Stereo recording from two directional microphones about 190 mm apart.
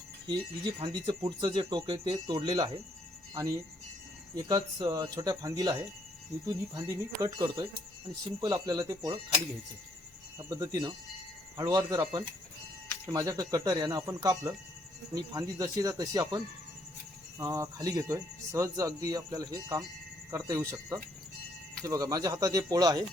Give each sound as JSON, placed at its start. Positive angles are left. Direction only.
{"t": 0.3, "sound": "speech", "side_deg": -25}
{"t": 10.3, "sound": "speech", "side_deg": -15}